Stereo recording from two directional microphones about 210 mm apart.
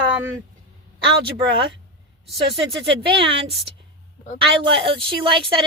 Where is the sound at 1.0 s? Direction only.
25° right (ahead or behind).